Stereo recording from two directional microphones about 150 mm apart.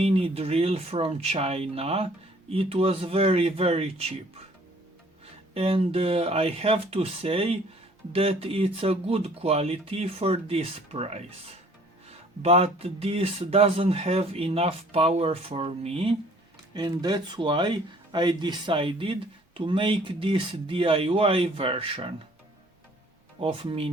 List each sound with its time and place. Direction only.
0.0 s speech: 40° right (ahead or behind)
5.2 s speech: 40° right (ahead or behind)
16.7 s speech: 25° right (ahead or behind)
23.4 s speech: 35° right (ahead or behind)